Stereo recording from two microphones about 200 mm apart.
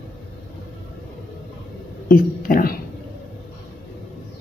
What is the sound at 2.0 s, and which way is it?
Speech, 45° left (ahead or behind).